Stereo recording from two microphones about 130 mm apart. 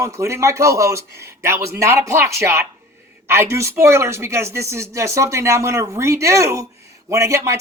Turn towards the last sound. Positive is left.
turn(degrees=-20)  # may be behind; listen again after turning